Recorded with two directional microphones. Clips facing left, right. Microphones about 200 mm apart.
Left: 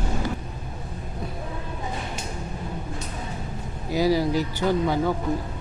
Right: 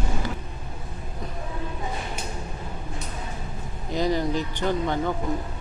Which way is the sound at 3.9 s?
5° left (ahead or behind).